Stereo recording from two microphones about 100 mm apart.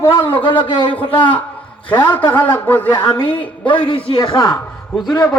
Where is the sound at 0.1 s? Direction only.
55° left (ahead or behind).